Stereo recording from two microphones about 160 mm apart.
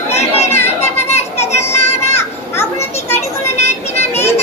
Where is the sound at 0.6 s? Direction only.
45° left (ahead or behind).